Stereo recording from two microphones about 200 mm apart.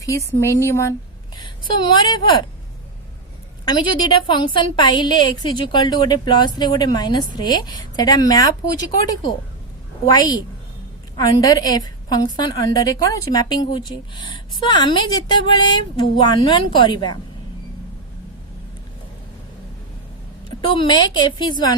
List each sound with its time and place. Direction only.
0.0 s speech: 15° left (ahead or behind)
3.7 s a woman's voice: 20° left (ahead or behind)
10.1 s a woman's voice: 20° left (ahead or behind)
20.7 s a woman's voice: 20° left (ahead or behind)